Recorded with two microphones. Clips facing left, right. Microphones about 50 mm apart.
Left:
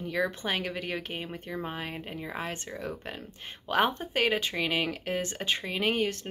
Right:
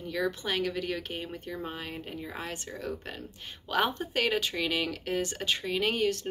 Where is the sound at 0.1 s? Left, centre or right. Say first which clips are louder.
Even; left.